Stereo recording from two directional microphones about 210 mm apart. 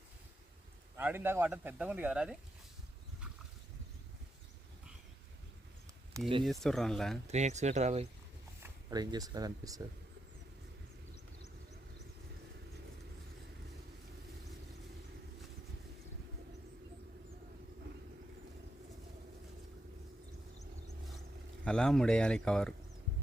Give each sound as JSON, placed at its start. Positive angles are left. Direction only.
{"t": 0.9, "sound": "speech", "side_deg": -10}
{"t": 6.4, "sound": "speech", "side_deg": 0}
{"t": 7.3, "sound": "speech", "side_deg": -35}
{"t": 8.6, "sound": "speech", "side_deg": -20}
{"t": 21.6, "sound": "speech", "side_deg": 5}